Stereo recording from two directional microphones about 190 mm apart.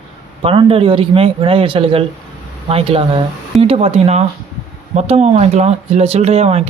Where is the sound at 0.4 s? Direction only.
30° right (ahead or behind).